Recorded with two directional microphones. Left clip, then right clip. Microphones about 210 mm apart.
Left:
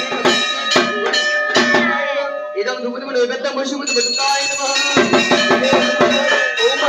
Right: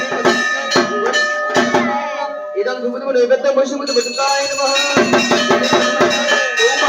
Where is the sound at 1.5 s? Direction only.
5° right (ahead or behind).